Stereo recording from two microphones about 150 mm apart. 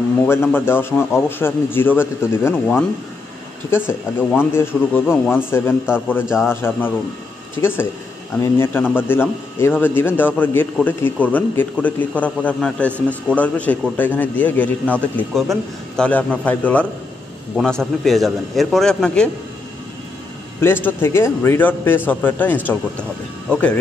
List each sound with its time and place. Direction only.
0.2 s a man's voice: 15° left (ahead or behind)
6.2 s a man's voice: 5° right (ahead or behind)
6.5 s a man's voice: 15° left (ahead or behind)
8.9 s a man's voice: 15° left (ahead or behind)
20.6 s a man's voice: 15° left (ahead or behind)